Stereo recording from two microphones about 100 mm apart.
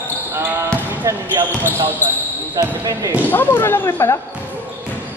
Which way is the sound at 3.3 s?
20° left (ahead or behind).